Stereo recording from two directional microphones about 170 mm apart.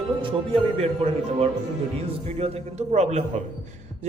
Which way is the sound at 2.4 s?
40° right (ahead or behind).